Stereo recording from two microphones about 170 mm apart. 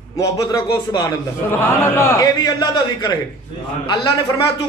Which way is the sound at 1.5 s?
15° left (ahead or behind).